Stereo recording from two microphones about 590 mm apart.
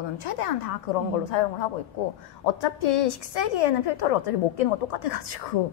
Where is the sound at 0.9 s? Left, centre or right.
Left.